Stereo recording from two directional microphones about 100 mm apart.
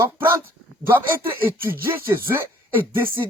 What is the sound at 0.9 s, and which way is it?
Speech, 20° right (ahead or behind).